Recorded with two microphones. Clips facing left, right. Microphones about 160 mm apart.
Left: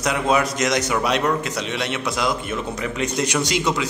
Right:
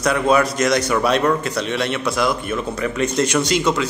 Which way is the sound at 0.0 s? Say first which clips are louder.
Right 3 dB; 20° left (ahead or behind).